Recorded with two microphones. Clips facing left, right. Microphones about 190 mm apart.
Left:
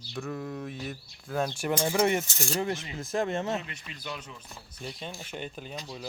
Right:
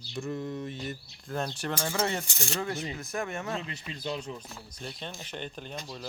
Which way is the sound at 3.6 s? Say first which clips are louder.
Right 5 dB; 30° right (ahead or behind).